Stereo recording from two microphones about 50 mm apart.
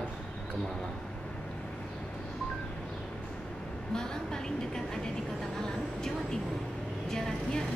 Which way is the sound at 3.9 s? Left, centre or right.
Centre.